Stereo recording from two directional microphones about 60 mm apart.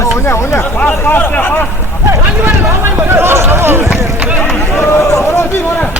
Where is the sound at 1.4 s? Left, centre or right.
Left.